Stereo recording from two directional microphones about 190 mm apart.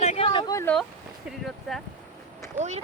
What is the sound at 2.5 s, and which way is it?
Speech, 35° right (ahead or behind).